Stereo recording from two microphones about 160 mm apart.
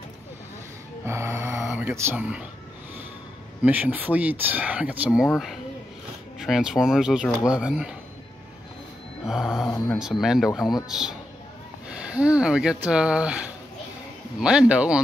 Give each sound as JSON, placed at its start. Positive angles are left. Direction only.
{"t": 1.0, "sound": "speech", "side_deg": -15}
{"t": 3.6, "sound": "speech", "side_deg": -10}
{"t": 6.4, "sound": "speech", "side_deg": -5}
{"t": 9.2, "sound": "speech", "side_deg": -5}
{"t": 14.4, "sound": "speech", "side_deg": -5}